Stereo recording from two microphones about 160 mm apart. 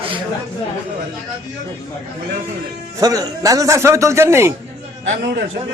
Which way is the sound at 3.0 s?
20° right (ahead or behind).